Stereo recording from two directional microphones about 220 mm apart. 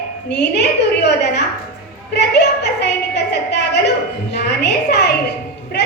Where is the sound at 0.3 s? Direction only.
50° left (ahead or behind).